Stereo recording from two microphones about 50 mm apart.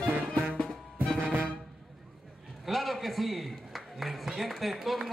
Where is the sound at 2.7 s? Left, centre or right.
Centre.